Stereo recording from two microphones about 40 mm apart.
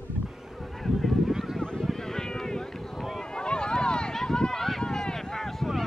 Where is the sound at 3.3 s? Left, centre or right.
Left.